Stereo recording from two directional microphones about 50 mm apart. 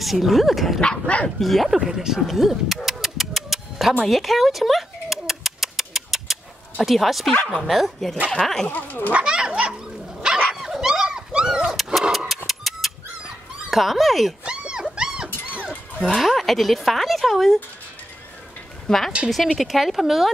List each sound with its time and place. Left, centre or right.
0.0 s speech: centre
0.7 s dog: left
1.4 s pigeon: centre
4.0 s a sound: centre
6.8 s speech: centre
8.6 s speech: left
9.1 s cat: centre
10.5 s dog: centre
11.7 s dog: centre
12.4 s a sound: centre
13.7 s speech: centre
14.4 s dog: centre
16.2 s speech: centre
18.9 s speech: centre